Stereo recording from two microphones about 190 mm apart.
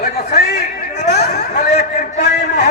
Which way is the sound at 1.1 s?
55° left (ahead or behind).